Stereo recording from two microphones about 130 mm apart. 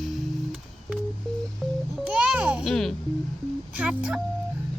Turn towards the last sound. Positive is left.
turn(degrees=-10)  # may be behind; listen again after turning